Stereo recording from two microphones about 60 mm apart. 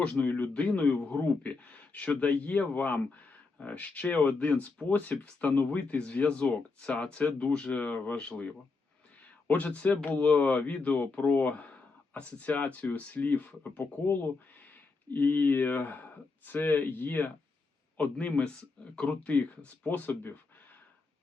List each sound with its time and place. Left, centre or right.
0.0 s a man's voice: left